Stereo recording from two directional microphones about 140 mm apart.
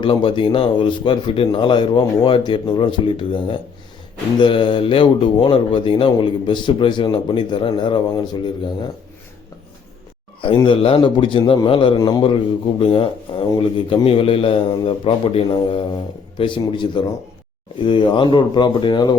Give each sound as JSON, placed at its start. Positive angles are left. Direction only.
{"t": 0.0, "sound": "speech", "side_deg": 35}
{"t": 10.4, "sound": "a man's voice", "side_deg": 40}